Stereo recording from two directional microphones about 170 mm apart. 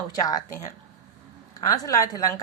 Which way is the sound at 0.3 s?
20° left (ahead or behind).